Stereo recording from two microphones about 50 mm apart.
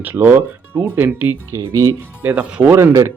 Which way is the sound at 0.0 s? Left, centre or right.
Right.